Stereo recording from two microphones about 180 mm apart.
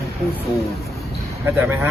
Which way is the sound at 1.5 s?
10° right (ahead or behind).